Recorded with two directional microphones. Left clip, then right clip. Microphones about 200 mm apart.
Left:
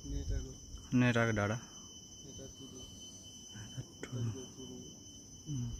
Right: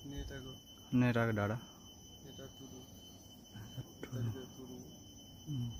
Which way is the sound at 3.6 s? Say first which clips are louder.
Right 1 dB; centre (ahead or behind).